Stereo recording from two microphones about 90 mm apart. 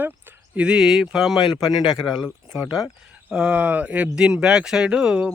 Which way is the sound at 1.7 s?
55° left (ahead or behind).